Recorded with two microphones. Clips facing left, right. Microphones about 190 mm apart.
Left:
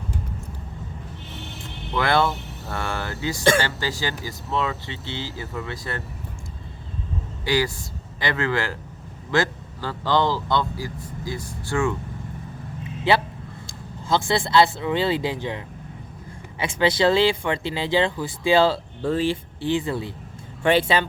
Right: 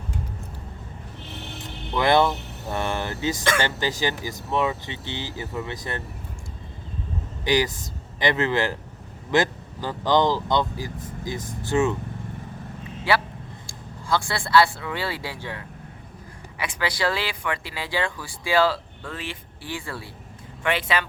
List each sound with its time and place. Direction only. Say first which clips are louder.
2.0 s speech: right 2 dB; 20° right (ahead or behind)
7.4 s speech: right 1 dB; 20° right (ahead or behind)
13.1 s a sound: left 3 dB; 20° left (ahead or behind)
13.7 s speech: left 2 dB; 20° left (ahead or behind)
20.7 s speech: left 6 dB; 30° left (ahead or behind)